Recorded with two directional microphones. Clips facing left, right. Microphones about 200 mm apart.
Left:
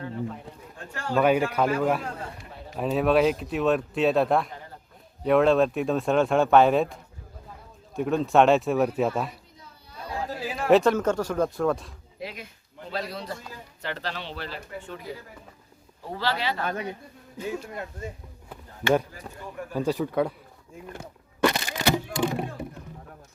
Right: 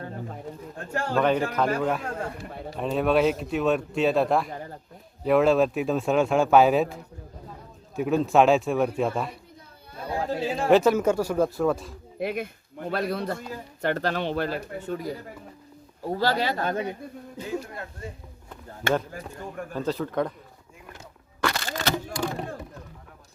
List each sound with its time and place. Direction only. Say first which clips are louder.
1.1 s speech: left 2 dB; 10° left (ahead or behind)
2.1 s a man's voice: right 5 dB; 55° right (ahead or behind)
2.7 s speech: left 1 dB; centre (ahead or behind)
10.1 s chatter: right 5 dB; 25° right (ahead or behind)
10.7 s speech: even; centre (ahead or behind)
12.2 s speech: right 9 dB; 55° right (ahead or behind); by 15.1 s 40° right (ahead or behind)
16.1 s speech: right 3 dB; 45° right (ahead or behind)
17.4 s speech: left 1 dB; 20° left (ahead or behind)
19.7 s speech: left 2 dB; 15° left (ahead or behind)
21.4 s crack: left 4 dB; 20° left (ahead or behind)